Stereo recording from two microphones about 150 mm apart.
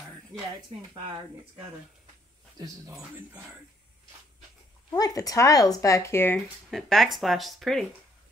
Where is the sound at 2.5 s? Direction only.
20° right (ahead or behind).